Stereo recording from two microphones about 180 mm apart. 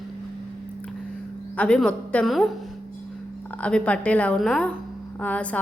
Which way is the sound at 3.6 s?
5° left (ahead or behind).